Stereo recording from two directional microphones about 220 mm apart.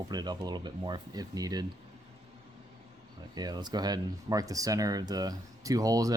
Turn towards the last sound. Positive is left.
turn(degrees=-15)  # may be behind; listen again after turning